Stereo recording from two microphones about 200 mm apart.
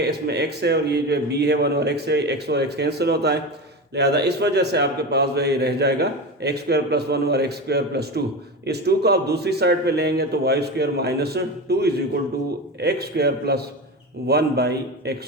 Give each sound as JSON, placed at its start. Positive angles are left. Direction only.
{"t": 0.0, "sound": "a man's voice", "side_deg": -55}